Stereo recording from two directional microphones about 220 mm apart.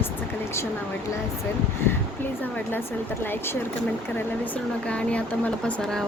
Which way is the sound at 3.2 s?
10° left (ahead or behind).